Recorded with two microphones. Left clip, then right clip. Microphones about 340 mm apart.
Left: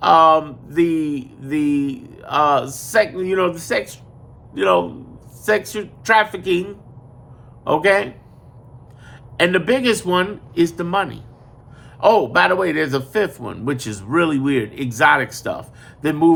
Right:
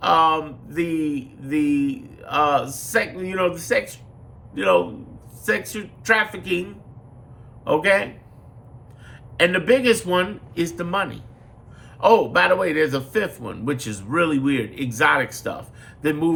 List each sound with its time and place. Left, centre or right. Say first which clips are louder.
0.0 s speech: left 5 dB; centre
9.4 s speech: left 1 dB; centre